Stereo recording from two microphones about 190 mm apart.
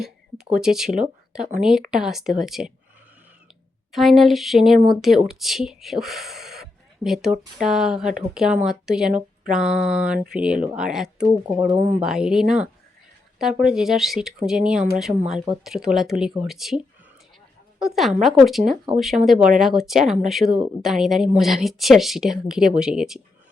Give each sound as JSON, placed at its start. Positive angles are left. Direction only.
{"t": 0.5, "sound": "speech", "side_deg": -5}
{"t": 3.9, "sound": "speech", "side_deg": 0}
{"t": 11.4, "sound": "speech", "side_deg": -20}
{"t": 11.9, "sound": "speech", "side_deg": -5}
{"t": 13.7, "sound": "speech", "side_deg": 0}